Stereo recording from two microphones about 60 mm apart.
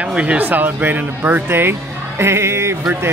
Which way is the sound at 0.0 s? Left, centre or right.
Centre.